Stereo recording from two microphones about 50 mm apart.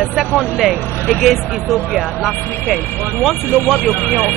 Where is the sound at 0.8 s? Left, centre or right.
Left.